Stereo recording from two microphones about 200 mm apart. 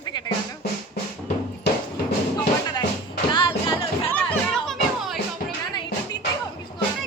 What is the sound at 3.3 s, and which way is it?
Music, 25° left (ahead or behind).